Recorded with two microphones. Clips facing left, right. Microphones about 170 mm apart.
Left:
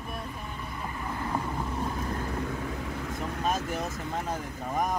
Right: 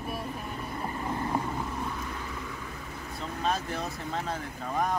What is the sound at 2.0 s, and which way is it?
Vehicle, 45° left (ahead or behind).